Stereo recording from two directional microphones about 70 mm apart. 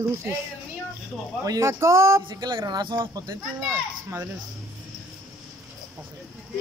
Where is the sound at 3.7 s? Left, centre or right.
Right.